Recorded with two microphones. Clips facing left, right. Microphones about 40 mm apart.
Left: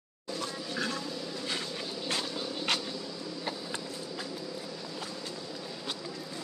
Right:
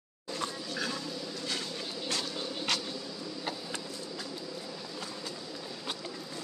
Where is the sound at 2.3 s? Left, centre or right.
Centre.